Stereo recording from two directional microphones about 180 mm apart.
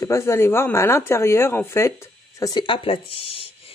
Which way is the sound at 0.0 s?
15° left (ahead or behind).